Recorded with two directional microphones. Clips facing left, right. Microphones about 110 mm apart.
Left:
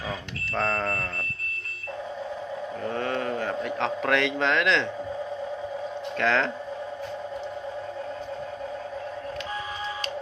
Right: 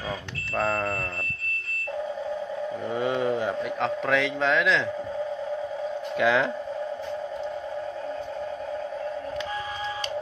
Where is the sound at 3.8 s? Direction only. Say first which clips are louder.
Even; centre (ahead or behind).